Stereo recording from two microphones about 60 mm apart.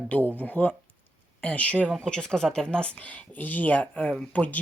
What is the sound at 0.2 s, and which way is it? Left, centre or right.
Speech, right.